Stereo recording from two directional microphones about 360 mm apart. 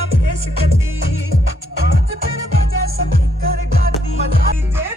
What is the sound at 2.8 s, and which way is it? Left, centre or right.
Music, right.